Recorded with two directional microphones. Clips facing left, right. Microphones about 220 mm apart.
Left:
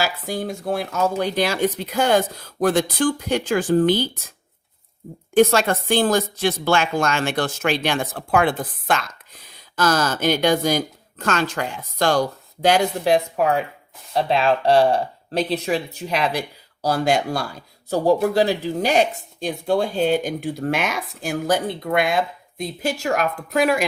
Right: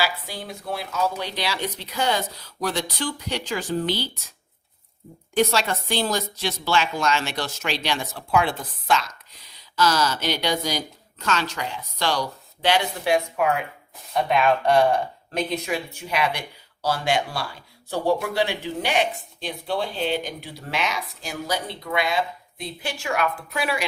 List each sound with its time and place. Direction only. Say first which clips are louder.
0.0 s speech: left 4 dB; 45° left (ahead or behind)
5.3 s speech: left 6 dB; 50° left (ahead or behind)